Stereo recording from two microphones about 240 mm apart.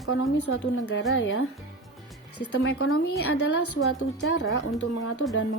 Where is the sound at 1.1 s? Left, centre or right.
Left.